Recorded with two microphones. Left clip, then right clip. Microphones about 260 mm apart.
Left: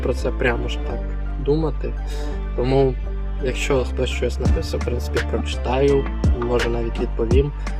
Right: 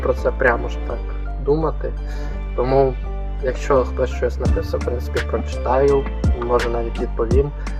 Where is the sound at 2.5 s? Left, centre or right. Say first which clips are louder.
Right 2 dB; left.